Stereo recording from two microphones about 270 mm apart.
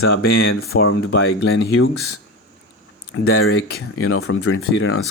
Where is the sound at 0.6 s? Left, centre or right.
Left.